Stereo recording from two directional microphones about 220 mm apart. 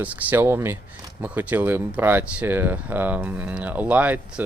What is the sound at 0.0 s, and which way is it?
Speech, 5° right (ahead or behind).